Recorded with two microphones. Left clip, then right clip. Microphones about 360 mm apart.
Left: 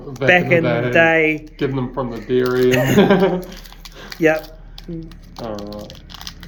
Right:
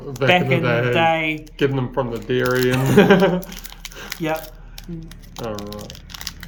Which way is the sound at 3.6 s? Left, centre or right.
Right.